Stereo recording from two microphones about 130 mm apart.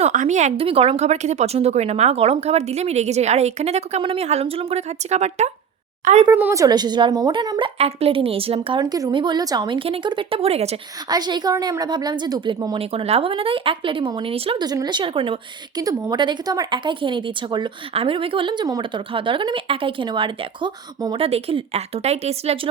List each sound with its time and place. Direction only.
0.0 s a woman's voice: 70° right (ahead or behind)
0.6 s speech: 45° right (ahead or behind)
6.3 s speech: 20° right (ahead or behind)
7.8 s speech: 50° right (ahead or behind)
8.8 s speech: 30° right (ahead or behind); by 10.8 s 50° right (ahead or behind)
11.1 s speech: 35° right (ahead or behind)
12.8 s speech: 50° right (ahead or behind)
14.6 s speech: 30° right (ahead or behind)
15.8 s speech: 25° right (ahead or behind)
21.2 s speech: 50° right (ahead or behind)